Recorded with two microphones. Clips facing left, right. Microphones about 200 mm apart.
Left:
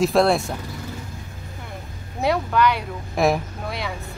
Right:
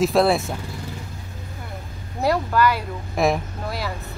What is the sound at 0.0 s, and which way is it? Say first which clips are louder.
Speech: even; centre (ahead or behind).